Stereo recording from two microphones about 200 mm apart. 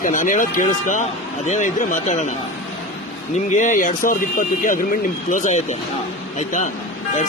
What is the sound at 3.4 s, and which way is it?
Speech, 40° left (ahead or behind).